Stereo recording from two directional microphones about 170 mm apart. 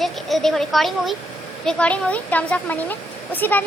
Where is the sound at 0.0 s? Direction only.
Centre (ahead or behind).